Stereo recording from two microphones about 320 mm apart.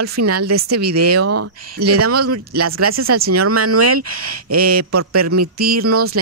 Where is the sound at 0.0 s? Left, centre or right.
Right.